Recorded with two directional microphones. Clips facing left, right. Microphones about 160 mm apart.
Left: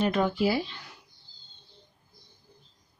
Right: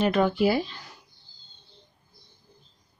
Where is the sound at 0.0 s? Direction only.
75° right (ahead or behind).